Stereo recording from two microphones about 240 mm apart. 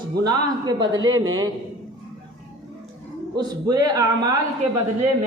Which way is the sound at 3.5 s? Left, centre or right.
Centre.